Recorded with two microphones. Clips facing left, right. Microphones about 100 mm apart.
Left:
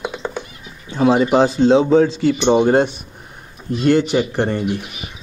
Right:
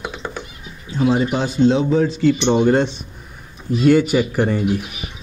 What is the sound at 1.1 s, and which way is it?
Speech, 75° left (ahead or behind).